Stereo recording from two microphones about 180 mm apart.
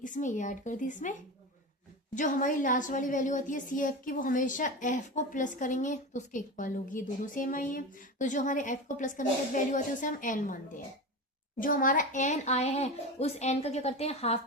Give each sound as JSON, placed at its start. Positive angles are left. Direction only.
{"t": 0.0, "sound": "a woman's voice", "side_deg": 45}
{"t": 2.1, "sound": "a woman's voice", "side_deg": 45}
{"t": 11.6, "sound": "a woman's voice", "side_deg": 50}